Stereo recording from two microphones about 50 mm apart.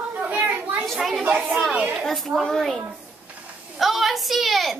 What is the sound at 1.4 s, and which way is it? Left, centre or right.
Speech, centre.